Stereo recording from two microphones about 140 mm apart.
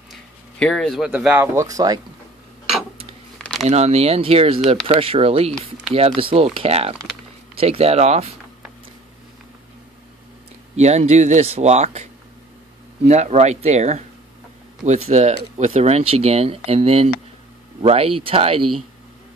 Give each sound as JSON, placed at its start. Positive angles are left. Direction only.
{"t": 0.1, "sound": "speech", "side_deg": 5}
{"t": 3.6, "sound": "speech", "side_deg": -50}
{"t": 10.8, "sound": "speech", "side_deg": -55}